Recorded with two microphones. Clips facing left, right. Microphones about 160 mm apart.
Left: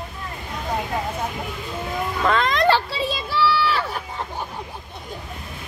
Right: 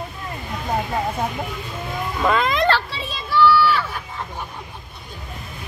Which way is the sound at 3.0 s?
30° left (ahead or behind).